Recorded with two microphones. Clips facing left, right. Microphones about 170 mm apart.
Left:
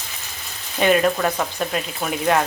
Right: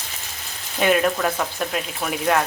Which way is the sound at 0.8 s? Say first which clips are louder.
Left 2 dB; centre (ahead or behind).